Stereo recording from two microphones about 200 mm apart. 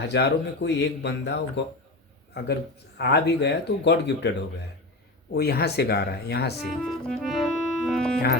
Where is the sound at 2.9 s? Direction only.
55° left (ahead or behind).